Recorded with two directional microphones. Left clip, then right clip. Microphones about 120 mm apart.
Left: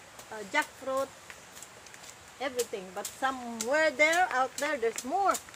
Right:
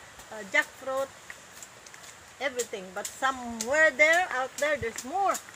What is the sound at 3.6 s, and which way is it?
Speech, 5° right (ahead or behind).